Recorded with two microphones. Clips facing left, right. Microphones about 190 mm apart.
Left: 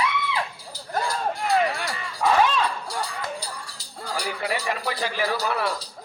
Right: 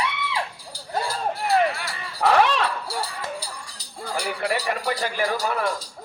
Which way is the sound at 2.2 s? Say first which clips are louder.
Right 2 dB; 70° right (ahead or behind).